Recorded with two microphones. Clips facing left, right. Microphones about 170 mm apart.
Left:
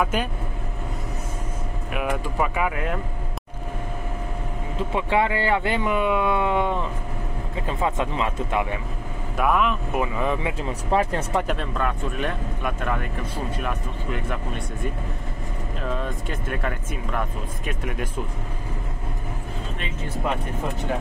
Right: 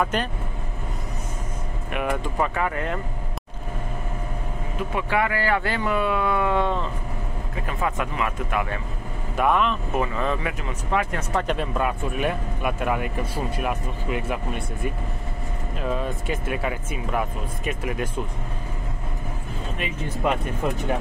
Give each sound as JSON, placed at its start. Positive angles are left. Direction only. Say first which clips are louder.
{"t": 0.0, "sound": "speech", "louder": "even", "side_deg": 5}
{"t": 1.9, "sound": "speech", "louder": "right 1 dB", "side_deg": 5}
{"t": 4.7, "sound": "speech", "louder": "left 2 dB", "side_deg": 25}
{"t": 9.4, "sound": "speech", "louder": "even", "side_deg": 5}
{"t": 10.7, "sound": "speech", "louder": "left 3 dB", "side_deg": 30}
{"t": 11.4, "sound": "speech", "louder": "right 1 dB", "side_deg": -5}
{"t": 15.9, "sound": "speech", "louder": "right 3 dB", "side_deg": -5}